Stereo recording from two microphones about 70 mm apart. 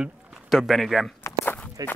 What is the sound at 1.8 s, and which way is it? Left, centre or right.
Speech, right.